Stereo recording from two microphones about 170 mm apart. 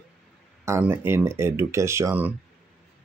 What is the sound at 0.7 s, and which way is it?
Speech, 15° right (ahead or behind).